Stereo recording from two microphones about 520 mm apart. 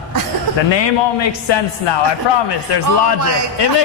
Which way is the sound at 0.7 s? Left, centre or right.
Left.